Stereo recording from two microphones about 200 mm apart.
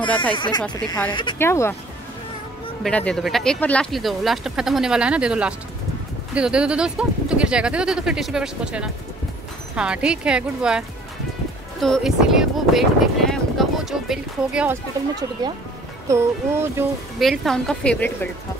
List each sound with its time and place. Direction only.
0.1 s speech: 5° left (ahead or behind)
0.4 s speech: 20° left (ahead or behind)
2.8 s speech: 5° left (ahead or behind)
11.8 s speech: centre (ahead or behind)
16.1 s speech: 15° right (ahead or behind)
17.2 s speech: centre (ahead or behind)